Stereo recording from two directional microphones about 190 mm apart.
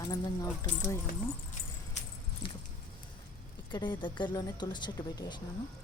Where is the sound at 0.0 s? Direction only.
20° left (ahead or behind).